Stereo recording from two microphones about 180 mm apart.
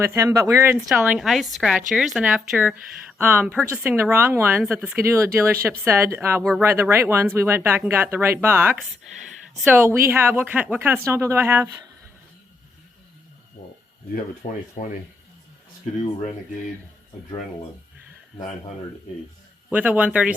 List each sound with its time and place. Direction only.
0.0 s speech: 15° right (ahead or behind)
14.4 s speech: 50° left (ahead or behind)
19.7 s speech: 10° right (ahead or behind)